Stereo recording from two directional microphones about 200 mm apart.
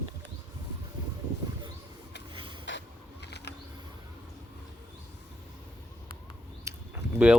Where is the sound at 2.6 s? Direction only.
60° left (ahead or behind).